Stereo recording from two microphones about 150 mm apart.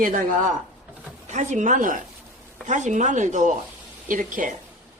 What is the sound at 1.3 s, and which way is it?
Speech, 50° right (ahead or behind).